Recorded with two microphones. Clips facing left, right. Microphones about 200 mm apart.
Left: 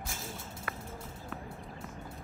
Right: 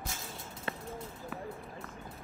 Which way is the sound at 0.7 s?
25° right (ahead or behind).